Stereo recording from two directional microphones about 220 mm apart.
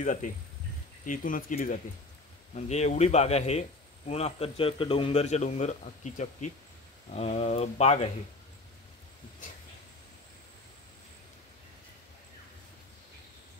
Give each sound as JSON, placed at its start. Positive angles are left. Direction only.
{"t": 0.0, "sound": "a man's voice", "side_deg": 35}